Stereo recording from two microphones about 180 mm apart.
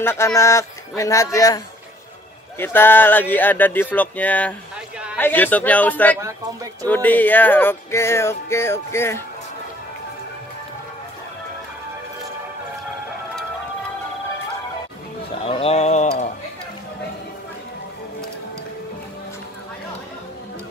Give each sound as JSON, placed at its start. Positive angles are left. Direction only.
{"t": 0.0, "sound": "music", "side_deg": 15}
{"t": 2.6, "sound": "music", "side_deg": 10}
{"t": 15.4, "sound": "a sound", "side_deg": 35}